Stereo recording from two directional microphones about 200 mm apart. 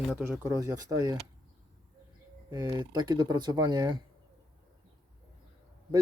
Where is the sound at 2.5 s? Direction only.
20° right (ahead or behind).